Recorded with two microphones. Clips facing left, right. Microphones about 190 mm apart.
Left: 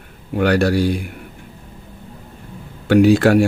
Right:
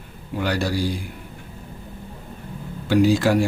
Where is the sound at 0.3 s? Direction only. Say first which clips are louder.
Left 8 dB; 65° left (ahead or behind).